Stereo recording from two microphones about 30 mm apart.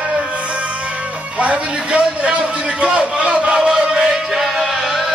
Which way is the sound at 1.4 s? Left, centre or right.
Right.